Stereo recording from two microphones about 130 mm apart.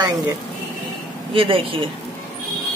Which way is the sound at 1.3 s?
45° right (ahead or behind).